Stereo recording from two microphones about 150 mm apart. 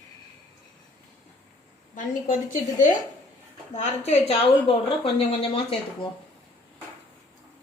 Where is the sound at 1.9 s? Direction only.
60° left (ahead or behind); by 5.8 s 40° left (ahead or behind).